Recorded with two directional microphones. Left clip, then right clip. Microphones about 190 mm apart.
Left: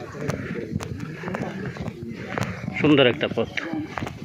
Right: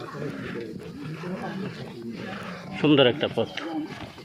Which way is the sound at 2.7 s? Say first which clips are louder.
Left 2 dB; 15° right (ahead or behind).